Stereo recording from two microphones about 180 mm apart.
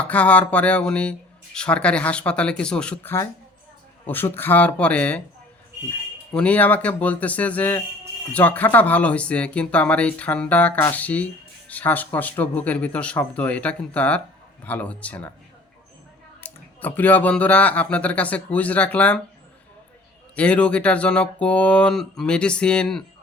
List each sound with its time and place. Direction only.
0.0 s speech: 10° left (ahead or behind)
6.3 s speech: 5° left (ahead or behind)
16.4 s speech: 10° left (ahead or behind)
20.3 s speech: 5° left (ahead or behind)